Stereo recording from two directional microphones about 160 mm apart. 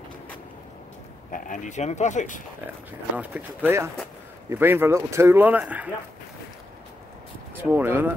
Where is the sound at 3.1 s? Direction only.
10° right (ahead or behind).